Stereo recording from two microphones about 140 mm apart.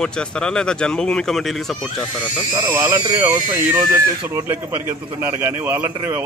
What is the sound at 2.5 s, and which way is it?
Speech, 20° right (ahead or behind).